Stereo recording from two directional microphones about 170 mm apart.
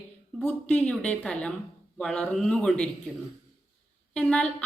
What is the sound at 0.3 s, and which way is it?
Speech, 5° left (ahead or behind).